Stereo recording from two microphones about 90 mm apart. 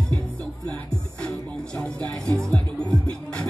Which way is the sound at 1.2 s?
5° left (ahead or behind).